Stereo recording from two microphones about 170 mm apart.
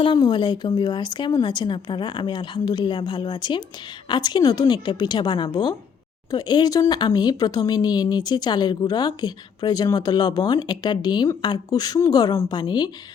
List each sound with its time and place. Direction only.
0.0 s speech: 25° left (ahead or behind)